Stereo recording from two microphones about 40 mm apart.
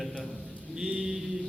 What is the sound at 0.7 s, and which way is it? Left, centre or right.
Mantra, centre.